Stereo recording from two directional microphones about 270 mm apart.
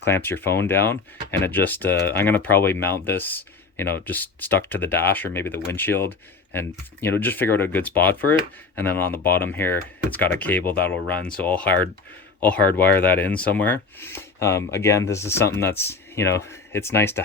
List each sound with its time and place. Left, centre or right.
0.0 s speech: centre